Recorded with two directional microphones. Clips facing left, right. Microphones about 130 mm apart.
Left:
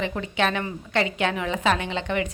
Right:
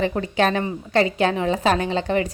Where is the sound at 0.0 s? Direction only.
40° right (ahead or behind).